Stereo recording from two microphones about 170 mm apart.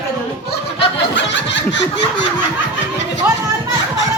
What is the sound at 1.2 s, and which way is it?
Snicker, 90° left.